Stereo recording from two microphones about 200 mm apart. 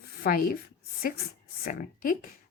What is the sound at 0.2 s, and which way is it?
Speech, 45° left (ahead or behind).